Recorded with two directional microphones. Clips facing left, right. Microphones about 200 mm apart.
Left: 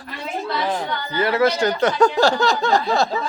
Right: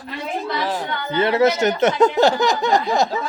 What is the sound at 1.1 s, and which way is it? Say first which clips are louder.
Speech: right 2 dB; 25° right (ahead or behind).